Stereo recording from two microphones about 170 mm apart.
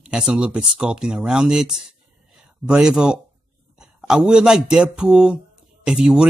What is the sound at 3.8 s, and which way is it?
A man's voice, 5° right (ahead or behind).